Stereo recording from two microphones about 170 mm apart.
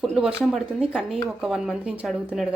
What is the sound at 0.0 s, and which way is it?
Speech, 5° right (ahead or behind).